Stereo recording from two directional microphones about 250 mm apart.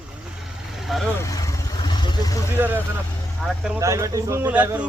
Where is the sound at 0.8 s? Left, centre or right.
Centre.